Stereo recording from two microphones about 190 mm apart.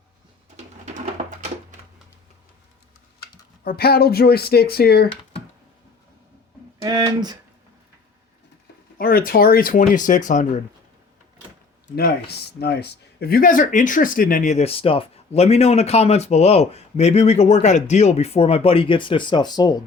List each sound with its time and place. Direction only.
0.5 s a sound: 35° right (ahead or behind)
3.6 s speech: 55° left (ahead or behind)
6.8 s speech: 20° right (ahead or behind)
9.0 s speech: 50° left (ahead or behind)
11.9 s speech: 55° left (ahead or behind); by 19.8 s 20° left (ahead or behind)